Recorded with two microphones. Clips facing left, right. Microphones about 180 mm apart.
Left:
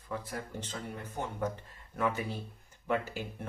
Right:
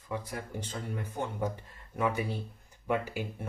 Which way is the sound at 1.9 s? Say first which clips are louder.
Right 2 dB; 10° right (ahead or behind).